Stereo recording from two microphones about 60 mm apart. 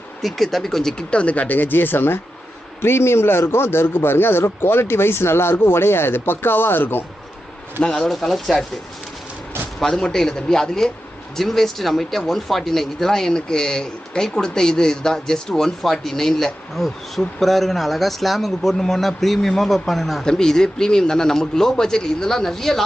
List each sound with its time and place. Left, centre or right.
0.2 s a man's voice: centre; by 7.1 s left
7.8 s speech: centre
9.8 s speech: centre